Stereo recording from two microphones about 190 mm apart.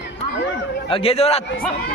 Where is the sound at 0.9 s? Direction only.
30° left (ahead or behind).